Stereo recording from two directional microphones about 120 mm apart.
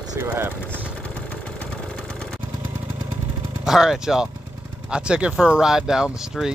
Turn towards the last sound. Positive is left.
turn(degrees=-5)  # may be behind; listen again after turning